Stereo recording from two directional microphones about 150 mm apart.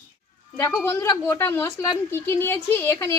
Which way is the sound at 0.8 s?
20° left (ahead or behind).